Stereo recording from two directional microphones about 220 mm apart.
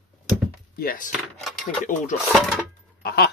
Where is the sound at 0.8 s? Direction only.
40° left (ahead or behind).